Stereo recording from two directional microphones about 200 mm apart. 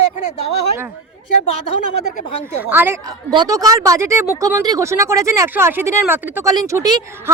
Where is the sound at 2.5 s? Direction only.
10° right (ahead or behind).